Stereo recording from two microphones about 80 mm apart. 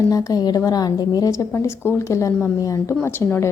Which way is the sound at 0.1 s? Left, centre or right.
Left.